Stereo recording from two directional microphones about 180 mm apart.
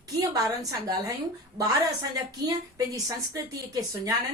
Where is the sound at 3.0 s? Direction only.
20° right (ahead or behind).